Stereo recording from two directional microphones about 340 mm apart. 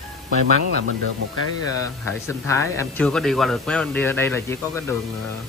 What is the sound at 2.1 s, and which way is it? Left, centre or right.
Speech, centre.